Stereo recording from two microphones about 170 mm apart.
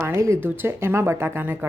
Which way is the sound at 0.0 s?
15° right (ahead or behind).